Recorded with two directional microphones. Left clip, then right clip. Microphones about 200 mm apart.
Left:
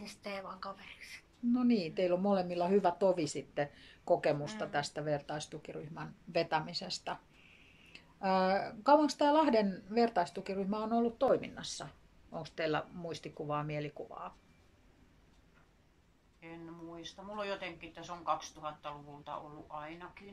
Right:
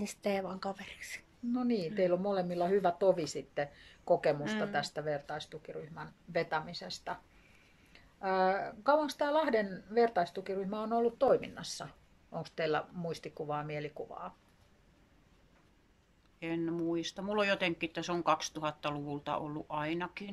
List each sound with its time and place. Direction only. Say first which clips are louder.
0.0 s a woman's voice: right 8 dB; 40° right (ahead or behind)
1.5 s speech: left 1 dB; centre (ahead or behind)
16.3 s speech: right 14 dB; 45° right (ahead or behind)